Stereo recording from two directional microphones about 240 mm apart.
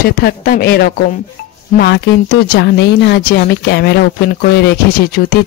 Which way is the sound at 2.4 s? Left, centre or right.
Left.